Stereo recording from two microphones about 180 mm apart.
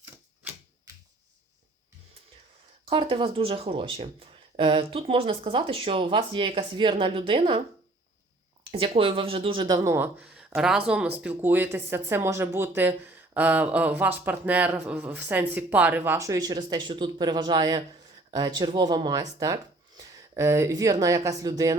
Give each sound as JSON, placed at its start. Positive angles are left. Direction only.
{"t": 2.8, "sound": "speech", "side_deg": -30}
{"t": 8.7, "sound": "speech", "side_deg": -30}